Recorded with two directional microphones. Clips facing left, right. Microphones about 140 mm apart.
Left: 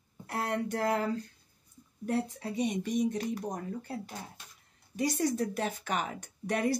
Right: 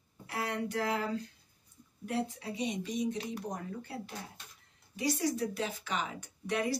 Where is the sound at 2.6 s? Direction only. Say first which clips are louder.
Left 5 dB; 50° left (ahead or behind).